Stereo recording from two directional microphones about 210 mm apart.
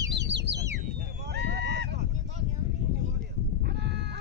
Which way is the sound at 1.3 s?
50° right (ahead or behind).